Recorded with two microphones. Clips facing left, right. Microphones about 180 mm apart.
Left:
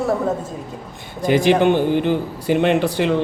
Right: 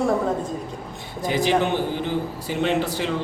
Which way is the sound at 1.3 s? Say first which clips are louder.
Left 6 dB; 65° left (ahead or behind).